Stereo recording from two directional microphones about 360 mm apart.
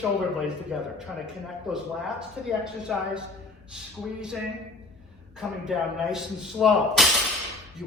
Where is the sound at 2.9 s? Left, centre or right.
Centre.